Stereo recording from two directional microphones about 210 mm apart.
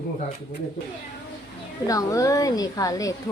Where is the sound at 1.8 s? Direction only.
15° left (ahead or behind).